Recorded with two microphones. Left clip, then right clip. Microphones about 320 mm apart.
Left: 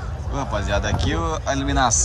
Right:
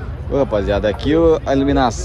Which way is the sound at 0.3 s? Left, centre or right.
Centre.